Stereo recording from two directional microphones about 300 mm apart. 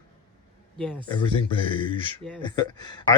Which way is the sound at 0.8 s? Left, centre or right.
Centre.